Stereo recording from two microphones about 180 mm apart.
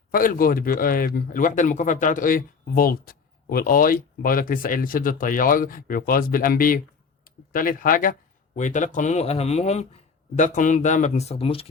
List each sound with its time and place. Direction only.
0.1 s a man's voice: 50° left (ahead or behind); by 11.6 s 30° left (ahead or behind)